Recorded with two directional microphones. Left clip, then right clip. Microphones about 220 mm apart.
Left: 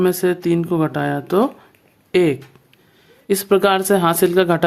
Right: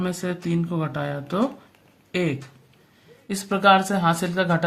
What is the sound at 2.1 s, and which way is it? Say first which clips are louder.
Speech: left 10 dB; 50° left (ahead or behind).